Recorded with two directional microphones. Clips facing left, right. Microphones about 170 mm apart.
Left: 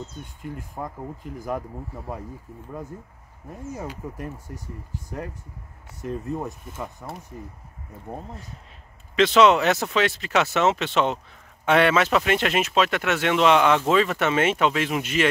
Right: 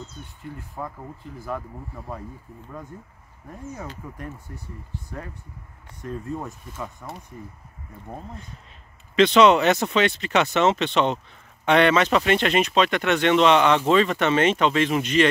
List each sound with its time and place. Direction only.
3.7 s speech: 10° left (ahead or behind)
6.2 s speech: 20° left (ahead or behind)
9.1 s speech: centre (ahead or behind)